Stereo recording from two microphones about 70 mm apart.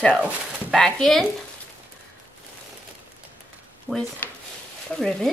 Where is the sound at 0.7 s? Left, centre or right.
Centre.